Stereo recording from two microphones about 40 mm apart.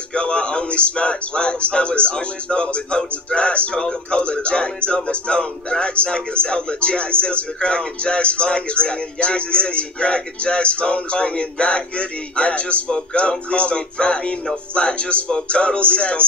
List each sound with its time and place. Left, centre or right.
0.1 s speech: left